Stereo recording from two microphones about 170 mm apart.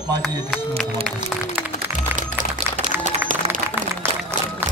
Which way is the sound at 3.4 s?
35° right (ahead or behind).